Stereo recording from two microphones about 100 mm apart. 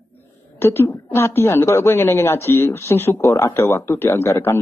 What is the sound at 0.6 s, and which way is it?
A woman's voice, 25° left (ahead or behind).